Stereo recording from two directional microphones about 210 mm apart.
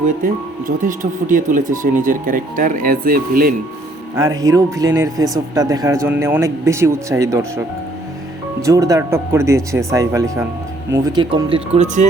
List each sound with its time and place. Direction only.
0.9 s speech: 40° right (ahead or behind)
4.1 s speech: 15° right (ahead or behind)
8.6 s speech: 15° right (ahead or behind)